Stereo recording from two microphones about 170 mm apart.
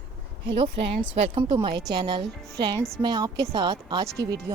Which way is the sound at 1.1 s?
30° right (ahead or behind).